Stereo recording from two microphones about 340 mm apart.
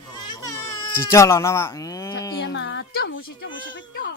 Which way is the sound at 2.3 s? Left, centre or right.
Left.